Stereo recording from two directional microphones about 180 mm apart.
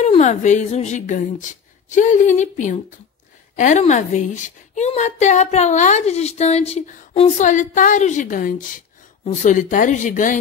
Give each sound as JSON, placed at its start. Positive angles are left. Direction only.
{"t": 0.0, "sound": "speech", "side_deg": 40}